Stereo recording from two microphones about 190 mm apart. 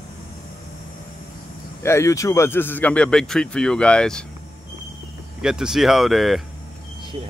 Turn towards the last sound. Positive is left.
turn(degrees=0)  # may be behind; listen again after turning